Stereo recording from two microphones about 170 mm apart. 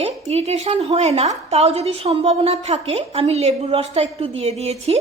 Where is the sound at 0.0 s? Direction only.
40° right (ahead or behind).